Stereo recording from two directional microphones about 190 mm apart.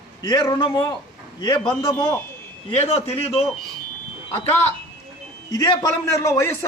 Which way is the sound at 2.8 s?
35° left (ahead or behind).